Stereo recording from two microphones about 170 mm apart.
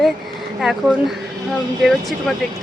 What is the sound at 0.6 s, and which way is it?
Speech, centre (ahead or behind).